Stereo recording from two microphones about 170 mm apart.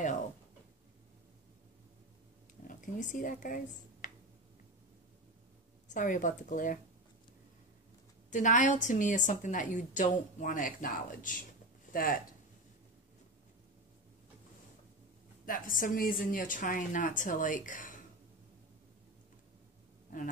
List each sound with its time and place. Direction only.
2.7 s speech: 50° left (ahead or behind)
5.9 s a woman's voice: 50° left (ahead or behind)
8.3 s a woman's voice: 50° left (ahead or behind)
15.4 s a woman's voice: 55° left (ahead or behind)